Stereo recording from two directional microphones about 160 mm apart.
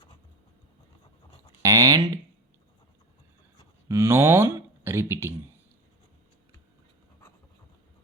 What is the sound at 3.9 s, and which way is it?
Speech, 15° right (ahead or behind).